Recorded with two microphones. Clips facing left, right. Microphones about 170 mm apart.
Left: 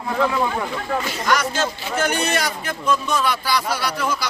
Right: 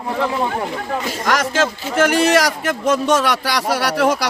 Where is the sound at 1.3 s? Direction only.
90° right.